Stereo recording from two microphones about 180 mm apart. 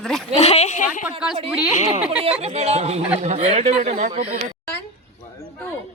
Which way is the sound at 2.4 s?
35° right (ahead or behind).